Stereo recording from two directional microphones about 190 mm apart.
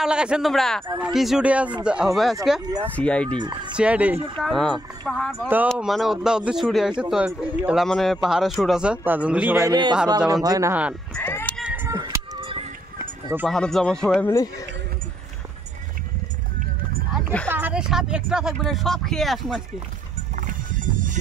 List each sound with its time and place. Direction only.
0.0 s a man's voice: 5° right (ahead or behind)
2.6 s speech: 20° right (ahead or behind)
3.0 s speech: 5° left (ahead or behind)
3.3 s speech: 25° right (ahead or behind)
3.7 s a man's voice: 5° right (ahead or behind)
9.7 s speech: 25° right (ahead or behind)
10.7 s speech: 5° right (ahead or behind)
11.1 s cat: 10° left (ahead or behind)
11.6 s music: 10° right (ahead or behind); by 12.6 s 25° right (ahead or behind)
13.0 s run: 10° right (ahead or behind)
13.5 s a man's voice: centre (ahead or behind)
17.1 s a sound: 5° left (ahead or behind)
17.5 s a man's voice: 10° right (ahead or behind)
20.3 s music: 45° right (ahead or behind)